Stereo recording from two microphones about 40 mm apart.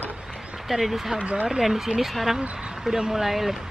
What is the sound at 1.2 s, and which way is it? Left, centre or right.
Speech, right.